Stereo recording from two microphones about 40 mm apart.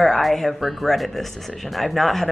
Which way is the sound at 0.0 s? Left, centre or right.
Centre.